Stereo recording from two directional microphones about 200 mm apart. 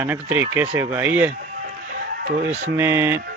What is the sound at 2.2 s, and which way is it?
Speech, 35° right (ahead or behind).